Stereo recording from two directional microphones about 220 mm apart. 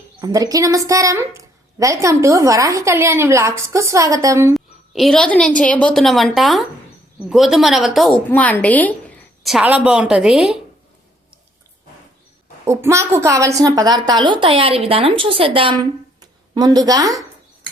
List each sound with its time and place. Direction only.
0.2 s a woman's voice: 15° right (ahead or behind)
4.5 s a woman's voice: centre (ahead or behind)
12.6 s a woman's voice: 10° right (ahead or behind)